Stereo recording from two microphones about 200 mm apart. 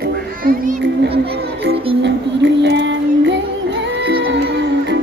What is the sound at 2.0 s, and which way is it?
Music, 60° right (ahead or behind).